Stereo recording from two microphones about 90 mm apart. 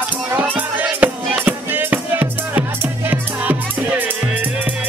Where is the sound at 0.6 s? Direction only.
15° right (ahead or behind).